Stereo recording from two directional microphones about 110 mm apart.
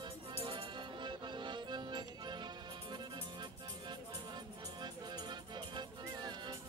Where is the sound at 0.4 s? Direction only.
50° right (ahead or behind).